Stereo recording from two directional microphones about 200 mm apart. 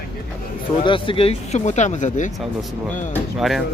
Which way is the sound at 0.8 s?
25° left (ahead or behind).